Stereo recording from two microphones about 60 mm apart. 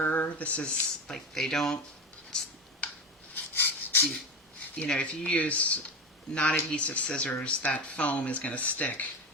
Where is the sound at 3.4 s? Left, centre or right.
Left.